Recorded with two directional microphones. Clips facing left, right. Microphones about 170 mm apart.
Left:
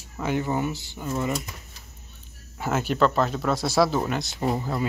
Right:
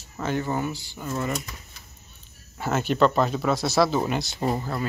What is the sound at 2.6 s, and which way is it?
Speech, 5° left (ahead or behind).